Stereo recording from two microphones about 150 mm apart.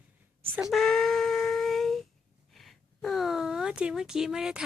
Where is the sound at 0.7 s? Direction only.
Centre (ahead or behind).